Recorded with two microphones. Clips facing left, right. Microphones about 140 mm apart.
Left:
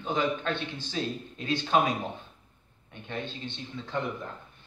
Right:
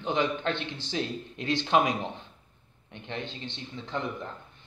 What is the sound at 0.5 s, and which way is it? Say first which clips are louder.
Speech: even; 70° right (ahead or behind).